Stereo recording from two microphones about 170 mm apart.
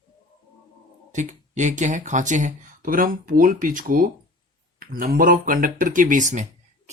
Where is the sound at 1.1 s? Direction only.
45° right (ahead or behind).